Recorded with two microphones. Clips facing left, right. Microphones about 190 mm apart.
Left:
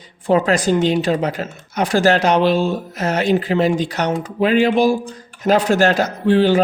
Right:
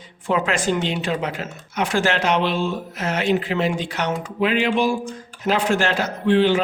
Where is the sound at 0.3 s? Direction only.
35° left (ahead or behind).